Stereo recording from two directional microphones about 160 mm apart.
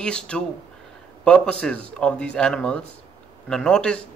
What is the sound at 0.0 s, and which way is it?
A man's voice, 5° left (ahead or behind).